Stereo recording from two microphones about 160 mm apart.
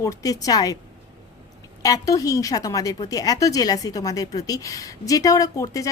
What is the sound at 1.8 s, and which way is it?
A woman's voice, 20° left (ahead or behind).